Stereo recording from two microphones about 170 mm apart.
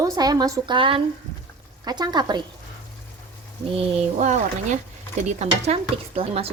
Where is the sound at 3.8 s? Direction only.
45° right (ahead or behind).